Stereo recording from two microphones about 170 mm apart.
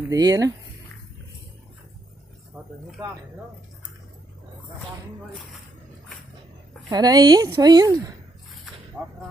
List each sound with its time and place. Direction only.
0.1 s a woman's voice: 20° right (ahead or behind)
6.9 s a woman's voice: 25° right (ahead or behind)